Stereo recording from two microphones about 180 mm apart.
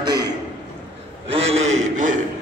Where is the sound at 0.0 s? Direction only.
20° right (ahead or behind).